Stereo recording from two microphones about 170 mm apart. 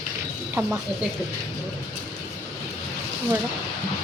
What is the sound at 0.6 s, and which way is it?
Speech, 15° right (ahead or behind).